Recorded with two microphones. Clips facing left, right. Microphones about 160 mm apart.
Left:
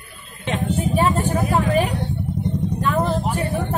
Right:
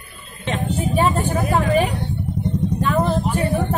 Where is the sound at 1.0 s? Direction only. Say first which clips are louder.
Right 1 dB; centre (ahead or behind).